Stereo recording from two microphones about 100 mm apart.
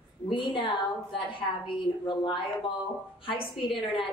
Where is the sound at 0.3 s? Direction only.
55° left (ahead or behind).